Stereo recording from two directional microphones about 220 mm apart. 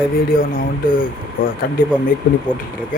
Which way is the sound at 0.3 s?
40° left (ahead or behind).